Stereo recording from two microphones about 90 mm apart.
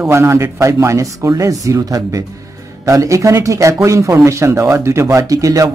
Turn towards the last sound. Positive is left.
turn(degrees=-40)  # may be behind; listen again after turning